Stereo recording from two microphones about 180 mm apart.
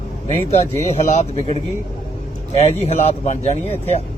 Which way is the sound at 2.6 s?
35° left (ahead or behind).